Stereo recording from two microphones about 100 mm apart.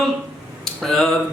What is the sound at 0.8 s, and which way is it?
Speech, centre (ahead or behind).